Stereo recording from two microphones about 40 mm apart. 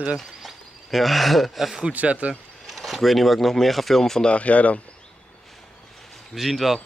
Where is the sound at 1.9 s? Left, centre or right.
Right.